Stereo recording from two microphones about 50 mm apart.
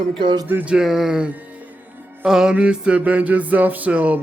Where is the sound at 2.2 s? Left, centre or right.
Centre.